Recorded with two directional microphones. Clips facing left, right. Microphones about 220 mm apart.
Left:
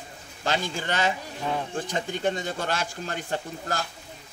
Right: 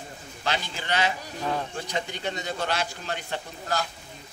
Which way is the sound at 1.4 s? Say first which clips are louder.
Right 2 dB; 5° left (ahead or behind).